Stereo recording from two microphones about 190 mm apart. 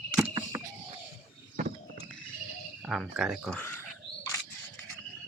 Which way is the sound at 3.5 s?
10° left (ahead or behind).